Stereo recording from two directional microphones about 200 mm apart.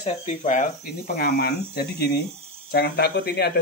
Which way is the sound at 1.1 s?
50° left (ahead or behind).